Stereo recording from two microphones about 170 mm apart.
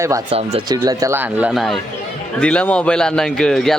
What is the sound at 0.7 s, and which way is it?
A man's voice, 20° right (ahead or behind).